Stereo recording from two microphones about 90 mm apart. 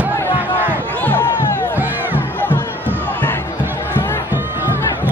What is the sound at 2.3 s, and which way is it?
Crowd, 20° left (ahead or behind).